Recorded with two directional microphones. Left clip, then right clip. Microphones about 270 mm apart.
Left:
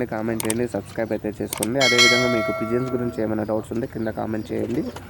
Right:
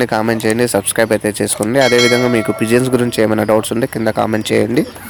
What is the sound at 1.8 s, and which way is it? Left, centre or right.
Speech, centre.